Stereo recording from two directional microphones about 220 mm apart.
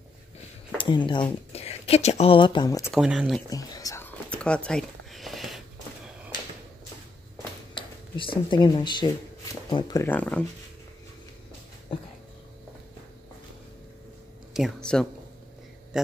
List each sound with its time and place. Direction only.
0.7 s speech: 20° left (ahead or behind)
2.9 s speech: 5° right (ahead or behind)
3.4 s whispering: 15° left (ahead or behind)
4.6 s a sound: centre (ahead or behind)
7.7 s speech: 20° left (ahead or behind); by 10.4 s 5° left (ahead or behind)
14.5 s speech: centre (ahead or behind)